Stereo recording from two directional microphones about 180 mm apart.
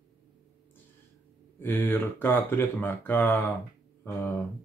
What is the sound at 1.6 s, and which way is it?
Speech, 10° left (ahead or behind).